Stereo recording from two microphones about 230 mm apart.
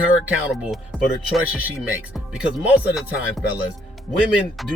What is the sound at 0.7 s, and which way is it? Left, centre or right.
Speech, centre.